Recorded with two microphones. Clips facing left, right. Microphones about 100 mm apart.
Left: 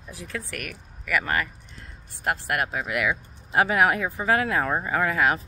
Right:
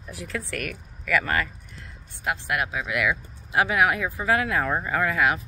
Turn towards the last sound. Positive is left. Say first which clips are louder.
# even
turn(degrees=35)  # may be behind; listen again after turning